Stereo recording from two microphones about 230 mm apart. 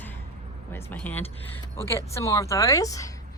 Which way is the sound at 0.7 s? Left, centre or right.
Centre.